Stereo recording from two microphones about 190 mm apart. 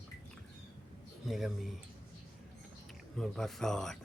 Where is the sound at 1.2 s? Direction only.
Centre (ahead or behind).